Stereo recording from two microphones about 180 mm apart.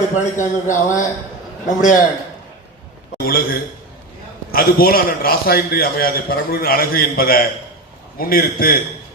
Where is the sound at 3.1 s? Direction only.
55° left (ahead or behind).